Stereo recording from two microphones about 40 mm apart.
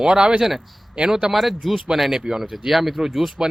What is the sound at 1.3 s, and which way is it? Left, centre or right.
Speech, centre.